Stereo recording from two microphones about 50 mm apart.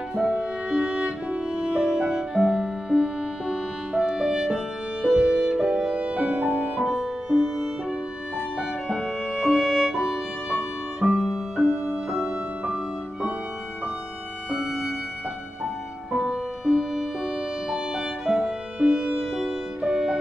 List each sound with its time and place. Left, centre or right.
0.1 s music: centre
6.5 s music: centre
11.6 s music: left
12.2 s music: right
14.5 s music: centre